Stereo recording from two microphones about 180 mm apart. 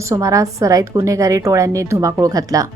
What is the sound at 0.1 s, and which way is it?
A woman's voice, 15° right (ahead or behind).